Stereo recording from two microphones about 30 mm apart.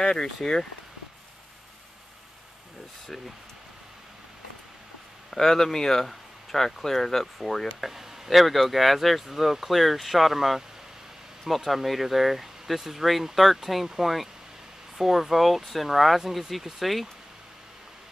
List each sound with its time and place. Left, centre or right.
0.1 s speech: centre
5.3 s speech: centre
7.8 s speech: centre